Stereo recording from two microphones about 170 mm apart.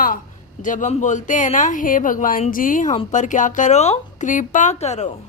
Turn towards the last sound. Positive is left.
turn(degrees=40)  # may be behind; listen again after turning